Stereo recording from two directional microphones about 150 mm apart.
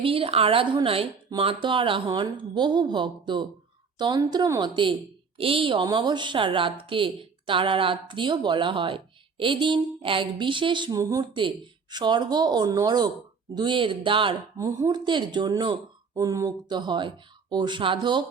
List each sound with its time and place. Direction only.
0.0 s speech: 40° right (ahead or behind)
14.6 s speech: 20° right (ahead or behind)